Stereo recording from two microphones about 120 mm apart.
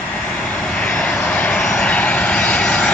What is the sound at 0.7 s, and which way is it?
Vehicle, 10° left (ahead or behind).